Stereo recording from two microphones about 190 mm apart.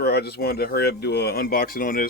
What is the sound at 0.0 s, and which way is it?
Speech, 60° left (ahead or behind).